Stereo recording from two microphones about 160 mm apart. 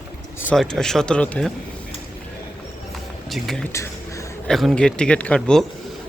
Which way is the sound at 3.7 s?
20° left (ahead or behind).